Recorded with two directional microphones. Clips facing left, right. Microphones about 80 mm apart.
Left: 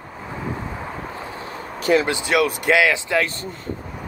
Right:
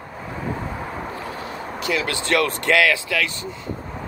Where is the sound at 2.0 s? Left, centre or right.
Centre.